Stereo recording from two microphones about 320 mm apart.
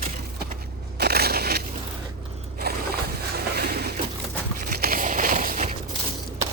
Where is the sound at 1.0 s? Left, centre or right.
Right.